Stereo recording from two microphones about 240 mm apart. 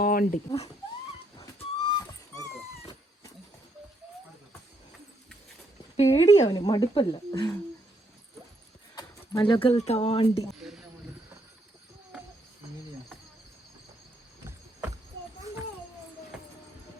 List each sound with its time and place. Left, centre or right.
0.0 s speech: left
1.5 s dog: centre
6.0 s speech: left
6.6 s speech: centre
9.0 s speech: centre
10.5 s a sound: centre